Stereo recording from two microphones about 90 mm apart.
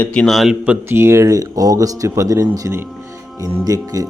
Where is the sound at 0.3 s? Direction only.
Centre (ahead or behind).